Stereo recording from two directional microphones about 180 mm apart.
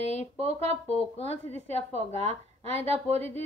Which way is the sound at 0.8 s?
35° left (ahead or behind).